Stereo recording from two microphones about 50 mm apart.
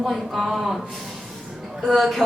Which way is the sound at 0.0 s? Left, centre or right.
Centre.